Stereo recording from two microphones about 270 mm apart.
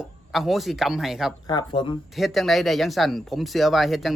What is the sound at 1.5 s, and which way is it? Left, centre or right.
Speech, centre.